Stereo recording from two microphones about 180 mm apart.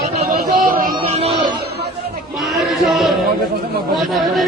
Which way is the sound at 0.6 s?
50° right (ahead or behind).